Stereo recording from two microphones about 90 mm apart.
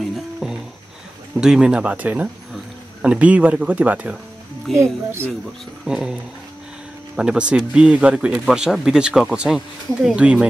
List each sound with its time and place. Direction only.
0.1 s music: 5° right (ahead or behind)
1.3 s speech: 10° right (ahead or behind)
5.9 s speech: 10° right (ahead or behind)
7.2 s speech: 10° right (ahead or behind)